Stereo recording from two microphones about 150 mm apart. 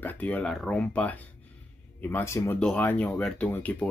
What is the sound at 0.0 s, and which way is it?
Speech, 10° left (ahead or behind).